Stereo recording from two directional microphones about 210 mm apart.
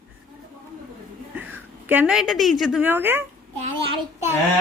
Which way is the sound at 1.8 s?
5° right (ahead or behind).